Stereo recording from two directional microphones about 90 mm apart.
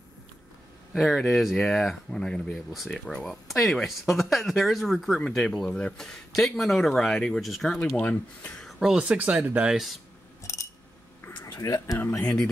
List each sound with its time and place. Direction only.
0.9 s speech: centre (ahead or behind)
8.0 s speech: 15° left (ahead or behind)
8.6 s speech: 5° right (ahead or behind)
10.4 s a sound: 35° left (ahead or behind)
11.4 s speech: 40° left (ahead or behind)